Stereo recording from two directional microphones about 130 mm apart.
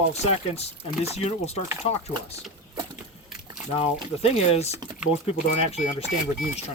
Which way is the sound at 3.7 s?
50° left (ahead or behind).